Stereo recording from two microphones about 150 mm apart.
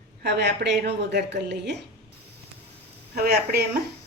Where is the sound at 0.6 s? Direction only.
70° right (ahead or behind).